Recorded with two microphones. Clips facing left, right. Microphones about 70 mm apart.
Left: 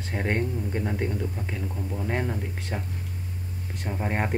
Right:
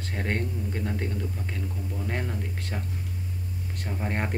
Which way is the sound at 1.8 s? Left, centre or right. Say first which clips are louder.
Left 3 dB; left.